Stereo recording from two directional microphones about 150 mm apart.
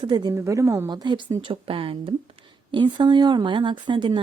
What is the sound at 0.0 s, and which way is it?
Speech, 30° right (ahead or behind).